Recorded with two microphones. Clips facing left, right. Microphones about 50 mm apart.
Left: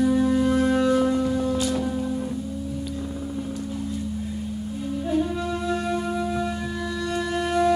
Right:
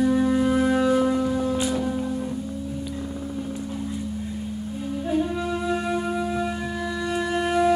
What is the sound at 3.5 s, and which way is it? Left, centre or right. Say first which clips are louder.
Music: even; centre.